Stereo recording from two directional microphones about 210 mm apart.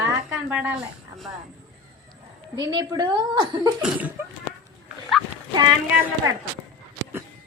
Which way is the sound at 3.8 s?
5° right (ahead or behind).